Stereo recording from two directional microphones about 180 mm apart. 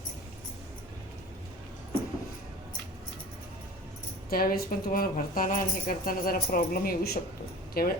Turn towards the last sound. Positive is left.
turn(degrees=55)  # may be behind; listen again after turning